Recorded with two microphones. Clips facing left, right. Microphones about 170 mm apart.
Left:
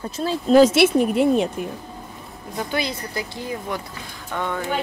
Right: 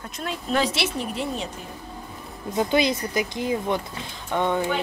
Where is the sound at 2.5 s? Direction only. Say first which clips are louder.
Right 5 dB; 20° right (ahead or behind).